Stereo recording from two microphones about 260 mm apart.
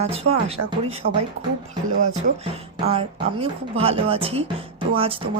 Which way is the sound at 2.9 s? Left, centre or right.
Right.